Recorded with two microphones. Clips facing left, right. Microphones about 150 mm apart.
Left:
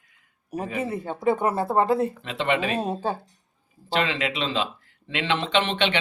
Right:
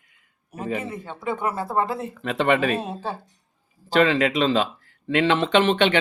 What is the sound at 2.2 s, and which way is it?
Speech, 50° right (ahead or behind).